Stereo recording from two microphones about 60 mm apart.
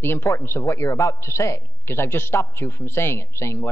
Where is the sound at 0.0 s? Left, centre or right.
Left.